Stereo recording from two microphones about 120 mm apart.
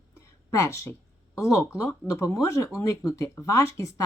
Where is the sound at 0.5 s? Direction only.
25° left (ahead or behind).